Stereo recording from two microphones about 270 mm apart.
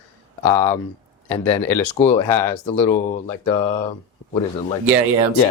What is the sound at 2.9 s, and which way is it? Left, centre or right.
Speech, left.